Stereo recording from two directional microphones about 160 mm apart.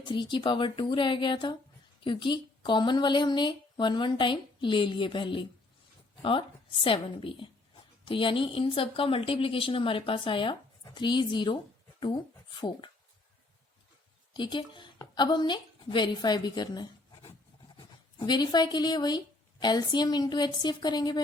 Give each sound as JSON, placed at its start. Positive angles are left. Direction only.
{"t": 0.0, "sound": "a woman's voice", "side_deg": 30}
{"t": 6.8, "sound": "a woman's voice", "side_deg": 35}
{"t": 14.3, "sound": "a woman's voice", "side_deg": 30}